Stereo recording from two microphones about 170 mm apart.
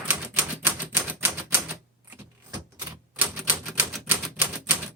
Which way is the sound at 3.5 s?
10° right (ahead or behind).